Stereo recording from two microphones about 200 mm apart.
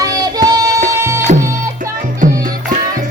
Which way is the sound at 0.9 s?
15° right (ahead or behind).